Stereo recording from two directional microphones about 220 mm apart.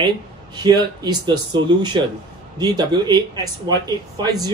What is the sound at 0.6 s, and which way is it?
Speech, 20° right (ahead or behind).